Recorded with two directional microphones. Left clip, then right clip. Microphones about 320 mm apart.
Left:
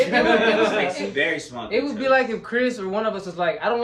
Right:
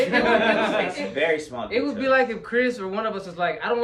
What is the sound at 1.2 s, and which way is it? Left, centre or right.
Speech, centre.